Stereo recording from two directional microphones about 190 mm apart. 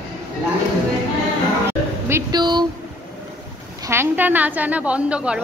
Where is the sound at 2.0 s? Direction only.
15° right (ahead or behind).